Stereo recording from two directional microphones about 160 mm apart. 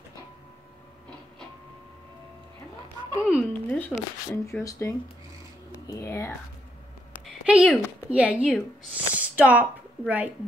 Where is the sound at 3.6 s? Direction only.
10° left (ahead or behind).